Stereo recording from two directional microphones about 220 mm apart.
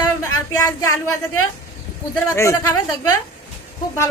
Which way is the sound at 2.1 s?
10° left (ahead or behind).